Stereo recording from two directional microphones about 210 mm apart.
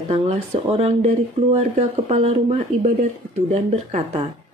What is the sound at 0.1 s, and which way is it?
A woman's voice, 30° right (ahead or behind).